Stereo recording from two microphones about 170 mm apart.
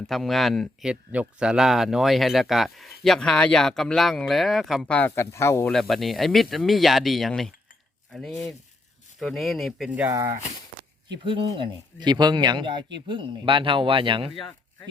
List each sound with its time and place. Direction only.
0.1 s speech: centre (ahead or behind)
5.7 s speech: centre (ahead or behind)
11.2 s speech: 30° right (ahead or behind)
14.3 s speech: centre (ahead or behind)